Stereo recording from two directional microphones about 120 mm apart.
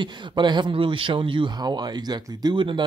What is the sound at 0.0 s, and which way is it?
Speech, 40° right (ahead or behind).